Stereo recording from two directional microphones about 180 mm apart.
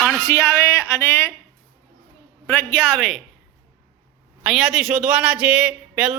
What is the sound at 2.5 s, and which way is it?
Speech, 5° left (ahead or behind).